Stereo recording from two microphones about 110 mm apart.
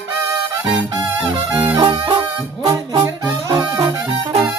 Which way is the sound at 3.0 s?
25° right (ahead or behind).